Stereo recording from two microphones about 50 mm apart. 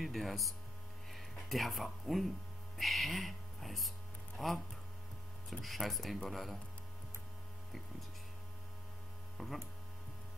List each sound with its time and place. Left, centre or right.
0.0 s speech: centre
9.4 s speech: centre